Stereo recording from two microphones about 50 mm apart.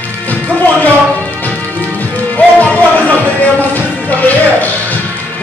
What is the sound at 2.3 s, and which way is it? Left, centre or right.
Music, left.